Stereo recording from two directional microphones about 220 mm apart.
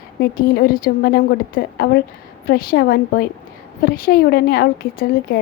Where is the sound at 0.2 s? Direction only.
45° left (ahead or behind).